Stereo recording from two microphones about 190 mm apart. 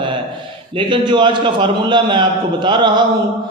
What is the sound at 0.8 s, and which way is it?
A man's voice, 25° right (ahead or behind).